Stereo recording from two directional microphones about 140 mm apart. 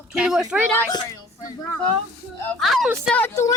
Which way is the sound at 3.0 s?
10° left (ahead or behind).